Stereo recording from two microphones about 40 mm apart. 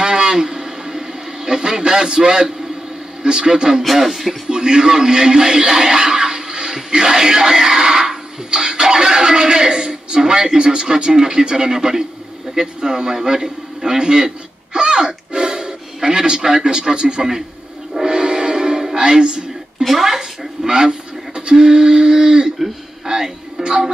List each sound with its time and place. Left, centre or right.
0.0 s radio: right
3.2 s speech: centre
3.8 s speech: centre
4.5 s a man's voice: centre
18.0 s music: right
20.0 s speech: centre
21.4 s a sound: right
23.0 s speech: centre